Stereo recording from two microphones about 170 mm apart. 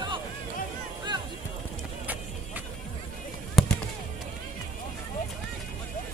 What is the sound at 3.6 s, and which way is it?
Fireworks, centre (ahead or behind).